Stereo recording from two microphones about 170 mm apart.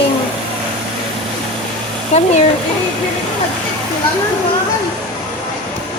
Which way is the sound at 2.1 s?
40° left (ahead or behind).